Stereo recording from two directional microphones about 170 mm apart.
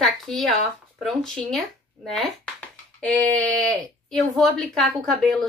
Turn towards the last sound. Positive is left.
turn(degrees=0)  # may be behind; listen again after turning